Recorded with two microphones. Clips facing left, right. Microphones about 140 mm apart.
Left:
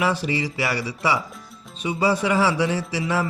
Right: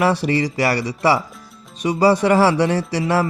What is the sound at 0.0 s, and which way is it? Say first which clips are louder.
A man's voice: right 5 dB; 65° right (ahead or behind).